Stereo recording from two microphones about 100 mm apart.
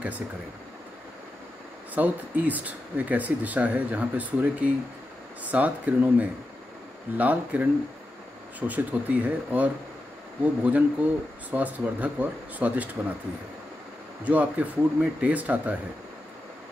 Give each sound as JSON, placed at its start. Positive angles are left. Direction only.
{"t": 2.0, "sound": "speech", "side_deg": -15}
{"t": 14.2, "sound": "speech", "side_deg": -15}